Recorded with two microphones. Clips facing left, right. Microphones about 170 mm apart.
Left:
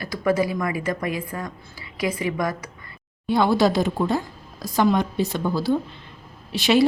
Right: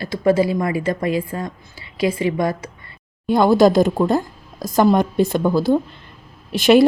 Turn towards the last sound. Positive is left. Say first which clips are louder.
# right 6 dB
turn(degrees=-50)  # may be behind; listen again after turning